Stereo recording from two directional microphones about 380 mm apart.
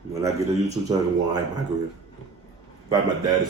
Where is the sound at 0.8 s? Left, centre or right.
Centre.